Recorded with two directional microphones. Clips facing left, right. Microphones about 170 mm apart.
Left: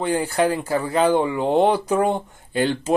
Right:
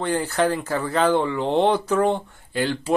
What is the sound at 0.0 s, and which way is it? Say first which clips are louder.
Speech: left 1 dB; 10° left (ahead or behind).